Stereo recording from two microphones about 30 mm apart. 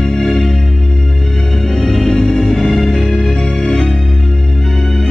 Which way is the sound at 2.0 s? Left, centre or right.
Centre.